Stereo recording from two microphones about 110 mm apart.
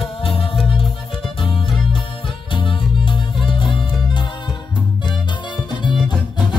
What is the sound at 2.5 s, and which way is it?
Music, 50° left (ahead or behind).